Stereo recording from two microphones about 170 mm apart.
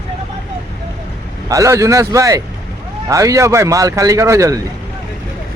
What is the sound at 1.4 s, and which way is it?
A man's voice, 20° right (ahead or behind).